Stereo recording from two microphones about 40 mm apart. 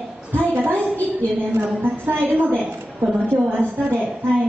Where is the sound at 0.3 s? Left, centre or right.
Right.